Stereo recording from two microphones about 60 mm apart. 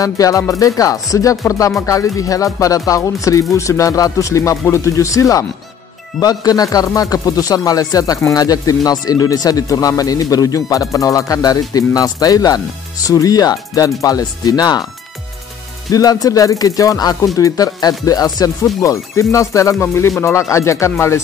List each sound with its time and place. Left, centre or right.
0.0 s speech: left
6.1 s speech: left
8.2 s speech: left
15.9 s music: left
17.4 s speech: left
18.8 s speech: left